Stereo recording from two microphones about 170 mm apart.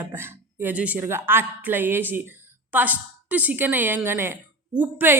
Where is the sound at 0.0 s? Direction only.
10° right (ahead or behind).